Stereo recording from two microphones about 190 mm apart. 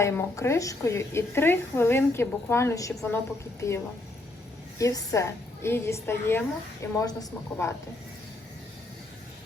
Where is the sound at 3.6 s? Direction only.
15° left (ahead or behind).